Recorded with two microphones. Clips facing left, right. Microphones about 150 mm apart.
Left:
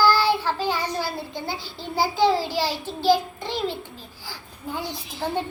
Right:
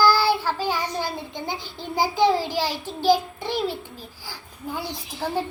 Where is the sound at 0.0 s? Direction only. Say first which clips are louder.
Even; 10° right (ahead or behind).